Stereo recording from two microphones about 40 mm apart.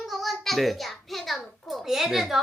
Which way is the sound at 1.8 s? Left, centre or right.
Centre.